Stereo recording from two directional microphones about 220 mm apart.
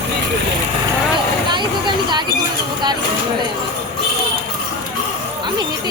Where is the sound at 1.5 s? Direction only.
20° right (ahead or behind).